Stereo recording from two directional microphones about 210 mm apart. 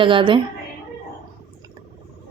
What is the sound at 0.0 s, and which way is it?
Speech, 25° right (ahead or behind).